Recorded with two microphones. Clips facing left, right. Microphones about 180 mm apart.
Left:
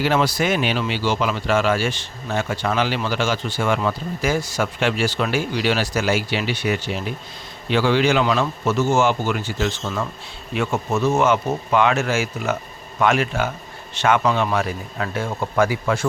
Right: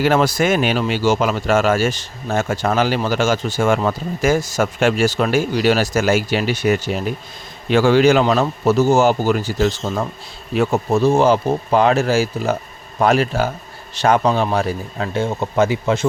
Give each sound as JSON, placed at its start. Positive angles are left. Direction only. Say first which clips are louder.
{"t": 0.0, "sound": "speech", "louder": "right 4 dB", "side_deg": -45}